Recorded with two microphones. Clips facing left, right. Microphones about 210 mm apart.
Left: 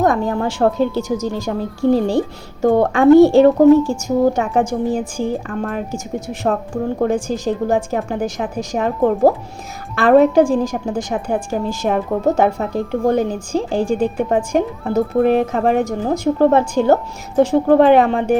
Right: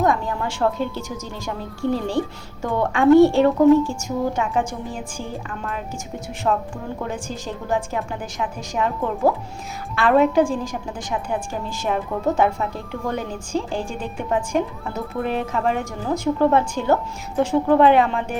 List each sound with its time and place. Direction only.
0.0 s a woman's voice: 40° left (ahead or behind)